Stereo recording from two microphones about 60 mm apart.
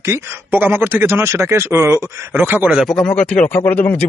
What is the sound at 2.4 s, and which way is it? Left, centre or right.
Speech, right.